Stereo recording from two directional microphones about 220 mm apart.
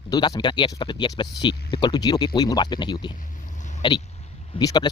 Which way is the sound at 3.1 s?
35° left (ahead or behind).